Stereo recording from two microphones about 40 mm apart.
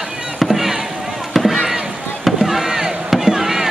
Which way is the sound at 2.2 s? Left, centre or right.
Centre.